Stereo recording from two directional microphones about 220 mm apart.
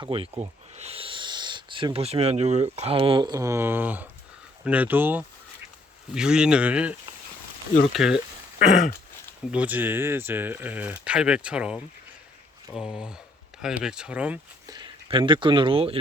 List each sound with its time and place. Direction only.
0.0 s speech: 25° right (ahead or behind); by 6.9 s 5° right (ahead or behind)
7.9 s speech: 5° right (ahead or behind)
9.5 s speech: 5° right (ahead or behind)
14.7 s speech: 20° right (ahead or behind)